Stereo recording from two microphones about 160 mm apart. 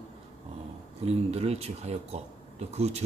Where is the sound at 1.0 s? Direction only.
40° right (ahead or behind).